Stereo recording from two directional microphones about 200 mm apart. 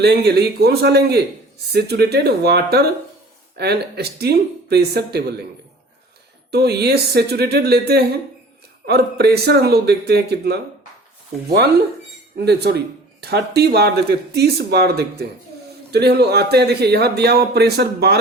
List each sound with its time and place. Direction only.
0.0 s a man's voice: 55° right (ahead or behind)
6.5 s speech: 55° right (ahead or behind)
12.5 s a man's voice: 55° right (ahead or behind)